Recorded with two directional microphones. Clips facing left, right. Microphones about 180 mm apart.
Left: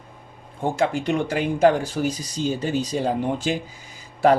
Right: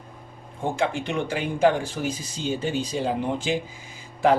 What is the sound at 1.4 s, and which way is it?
Speech, 40° left (ahead or behind).